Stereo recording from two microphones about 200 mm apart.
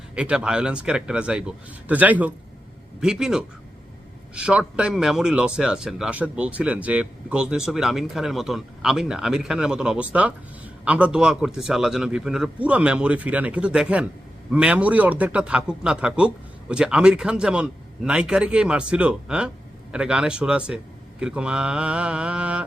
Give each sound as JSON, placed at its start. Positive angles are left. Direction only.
{"t": 0.2, "sound": "speech", "side_deg": -5}